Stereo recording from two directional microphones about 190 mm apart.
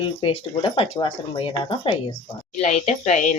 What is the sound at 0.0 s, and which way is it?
Speech, 25° left (ahead or behind).